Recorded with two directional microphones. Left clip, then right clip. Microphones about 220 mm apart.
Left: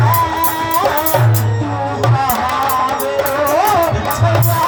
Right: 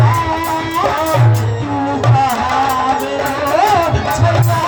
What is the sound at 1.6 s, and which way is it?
Music, 30° right (ahead or behind).